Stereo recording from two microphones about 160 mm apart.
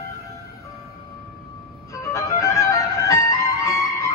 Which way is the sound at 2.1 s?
20° left (ahead or behind).